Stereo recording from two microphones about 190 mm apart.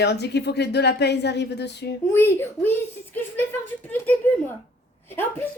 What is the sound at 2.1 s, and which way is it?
Speech, 10° left (ahead or behind).